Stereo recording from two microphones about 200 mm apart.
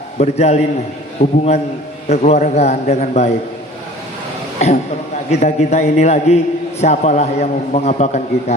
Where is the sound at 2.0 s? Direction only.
35° left (ahead or behind).